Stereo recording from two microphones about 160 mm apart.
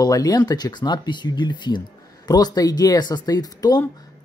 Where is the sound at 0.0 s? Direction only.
25° left (ahead or behind).